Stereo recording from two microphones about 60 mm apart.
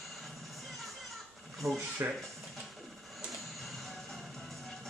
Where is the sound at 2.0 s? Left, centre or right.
Right.